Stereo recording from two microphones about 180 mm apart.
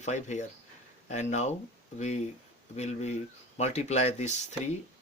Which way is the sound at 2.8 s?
40° left (ahead or behind).